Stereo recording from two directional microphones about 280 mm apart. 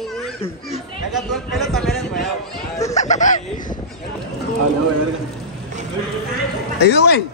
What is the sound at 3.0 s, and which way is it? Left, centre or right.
Music, left.